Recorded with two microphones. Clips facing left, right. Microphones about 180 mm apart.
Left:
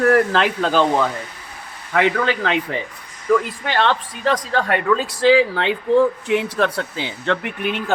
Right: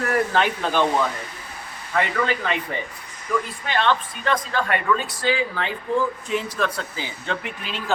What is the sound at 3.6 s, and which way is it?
Speech, 75° left (ahead or behind).